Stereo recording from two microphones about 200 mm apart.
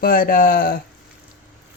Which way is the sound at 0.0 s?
45° left (ahead or behind).